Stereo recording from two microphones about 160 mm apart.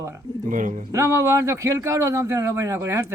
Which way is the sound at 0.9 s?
20° right (ahead or behind).